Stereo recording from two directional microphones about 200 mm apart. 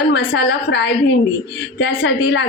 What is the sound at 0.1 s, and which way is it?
A woman's voice, 60° left (ahead or behind).